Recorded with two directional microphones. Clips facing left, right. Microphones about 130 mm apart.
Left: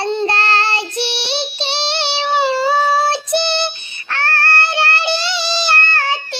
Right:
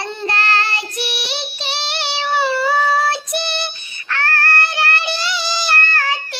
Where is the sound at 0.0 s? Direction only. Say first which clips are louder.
Left 5 dB; 25° left (ahead or behind).